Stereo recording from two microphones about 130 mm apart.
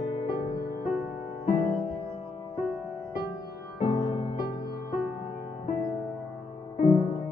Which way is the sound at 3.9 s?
50° left (ahead or behind).